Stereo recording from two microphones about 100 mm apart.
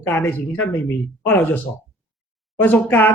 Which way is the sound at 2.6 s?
20° left (ahead or behind).